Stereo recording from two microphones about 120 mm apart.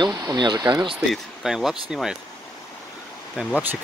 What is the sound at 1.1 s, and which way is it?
Speech, 5° right (ahead or behind).